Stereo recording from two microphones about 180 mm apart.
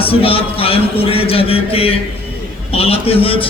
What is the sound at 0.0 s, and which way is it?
A man's voice, 30° left (ahead or behind).